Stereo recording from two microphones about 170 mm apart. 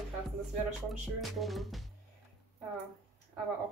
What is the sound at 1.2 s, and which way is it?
Speech, centre (ahead or behind).